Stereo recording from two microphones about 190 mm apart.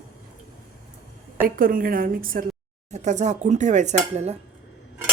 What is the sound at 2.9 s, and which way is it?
Speech, 40° right (ahead or behind).